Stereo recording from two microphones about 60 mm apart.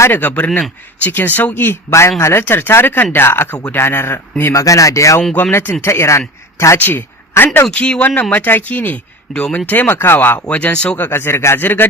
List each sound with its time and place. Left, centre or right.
0.1 s speech: left
1.9 s speech: left
2.4 s speech: left
4.5 s speech: left
5.5 s speech: left
6.7 s speech: left
7.7 s speech: centre
8.3 s speech: left
9.3 s speech: centre; by 10.4 s left
10.5 s speech: left
11.1 s speech: left